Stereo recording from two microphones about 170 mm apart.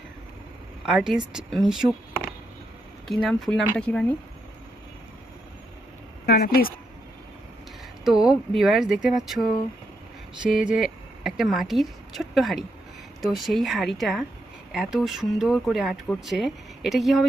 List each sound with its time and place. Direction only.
0.9 s speech: 5° right (ahead or behind)
3.1 s speech: centre (ahead or behind)
6.2 s speech: 65° left (ahead or behind)
8.0 s speech: 5° right (ahead or behind)
10.6 s speech: 5° right (ahead or behind)